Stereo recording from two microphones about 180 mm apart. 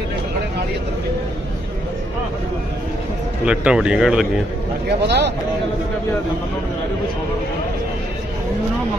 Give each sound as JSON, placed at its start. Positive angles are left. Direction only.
{"t": 3.4, "sound": "speech", "side_deg": -5}
{"t": 4.8, "sound": "speech", "side_deg": -70}